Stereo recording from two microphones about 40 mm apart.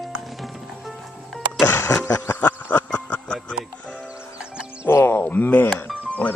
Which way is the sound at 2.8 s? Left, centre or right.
Left.